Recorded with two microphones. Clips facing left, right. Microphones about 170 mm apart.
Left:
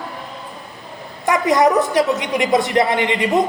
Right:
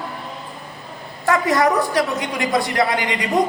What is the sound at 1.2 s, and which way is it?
A woman's voice, 20° left (ahead or behind).